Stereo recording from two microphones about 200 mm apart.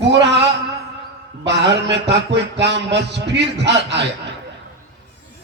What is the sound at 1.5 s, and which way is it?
A man's voice, 60° right (ahead or behind).